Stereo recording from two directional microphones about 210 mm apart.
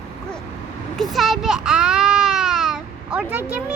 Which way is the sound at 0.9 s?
Centre (ahead or behind).